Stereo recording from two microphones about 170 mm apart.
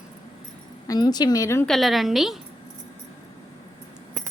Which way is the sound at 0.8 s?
25° left (ahead or behind).